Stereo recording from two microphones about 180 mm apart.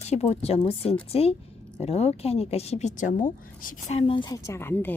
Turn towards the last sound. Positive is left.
turn(degrees=10)  # may be behind; listen again after turning